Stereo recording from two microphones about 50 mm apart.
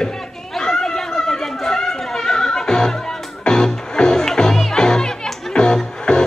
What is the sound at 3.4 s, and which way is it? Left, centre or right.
Music, centre.